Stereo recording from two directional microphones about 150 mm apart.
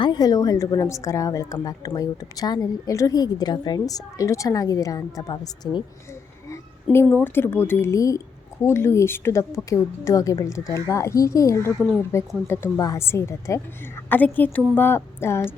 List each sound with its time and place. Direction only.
0.0 s a woman's voice: 30° left (ahead or behind)
6.9 s a woman's voice: 15° left (ahead or behind)